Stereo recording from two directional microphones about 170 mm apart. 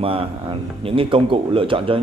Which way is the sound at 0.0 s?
35° right (ahead or behind).